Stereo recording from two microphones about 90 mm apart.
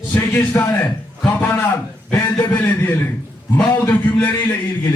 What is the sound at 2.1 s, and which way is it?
A man's voice, 20° left (ahead or behind).